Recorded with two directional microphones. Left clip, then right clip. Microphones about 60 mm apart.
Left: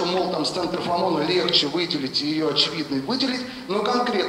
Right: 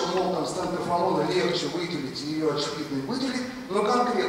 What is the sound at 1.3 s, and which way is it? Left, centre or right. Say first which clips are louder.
A man's voice: left 5 dB; centre.